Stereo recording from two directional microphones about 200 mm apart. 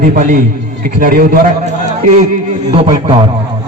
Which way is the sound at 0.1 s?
40° right (ahead or behind).